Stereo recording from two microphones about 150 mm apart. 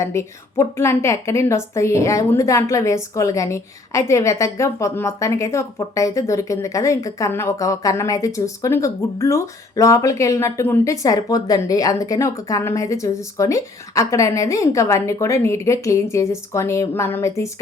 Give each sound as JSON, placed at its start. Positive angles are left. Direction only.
{"t": 0.0, "sound": "a woman's voice", "side_deg": 20}